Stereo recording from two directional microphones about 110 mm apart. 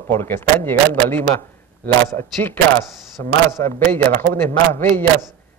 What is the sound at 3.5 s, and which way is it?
A man's voice, 25° left (ahead or behind).